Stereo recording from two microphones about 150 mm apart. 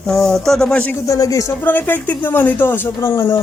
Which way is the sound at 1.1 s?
20° left (ahead or behind).